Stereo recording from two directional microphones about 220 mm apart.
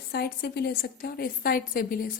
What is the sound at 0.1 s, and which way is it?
A woman's voice, 45° left (ahead or behind).